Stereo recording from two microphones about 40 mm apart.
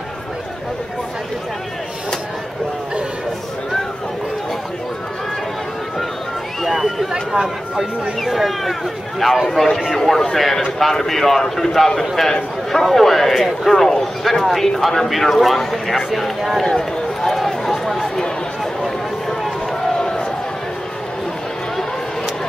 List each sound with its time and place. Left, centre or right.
6.6 s run: centre
7.1 s a man's voice: centre
9.5 s a man's voice: centre
16.6 s speech: centre
17.8 s run: centre
20.0 s a sound: centre